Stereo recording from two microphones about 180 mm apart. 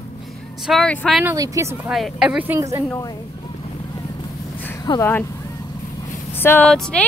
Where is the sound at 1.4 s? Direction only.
15° right (ahead or behind).